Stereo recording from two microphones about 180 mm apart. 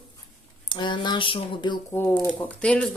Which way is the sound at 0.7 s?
25° left (ahead or behind).